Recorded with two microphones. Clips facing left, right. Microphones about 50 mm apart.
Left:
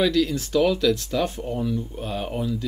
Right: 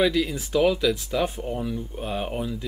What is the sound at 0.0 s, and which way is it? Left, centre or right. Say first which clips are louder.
Speech: left 1 dB; centre.